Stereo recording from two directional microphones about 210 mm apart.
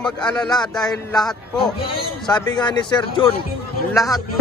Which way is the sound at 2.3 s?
20° left (ahead or behind).